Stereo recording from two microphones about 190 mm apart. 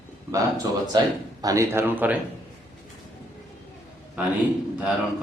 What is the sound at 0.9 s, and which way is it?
A man's voice, 25° right (ahead or behind).